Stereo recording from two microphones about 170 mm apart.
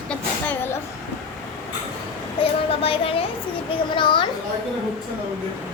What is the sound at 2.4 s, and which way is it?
A child's voice, 35° left (ahead or behind).